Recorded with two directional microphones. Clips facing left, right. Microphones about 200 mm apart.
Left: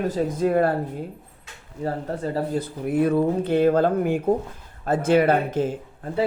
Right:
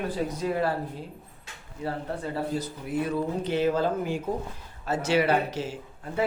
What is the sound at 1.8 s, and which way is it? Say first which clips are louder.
Speech: left 5 dB; 40° left (ahead or behind).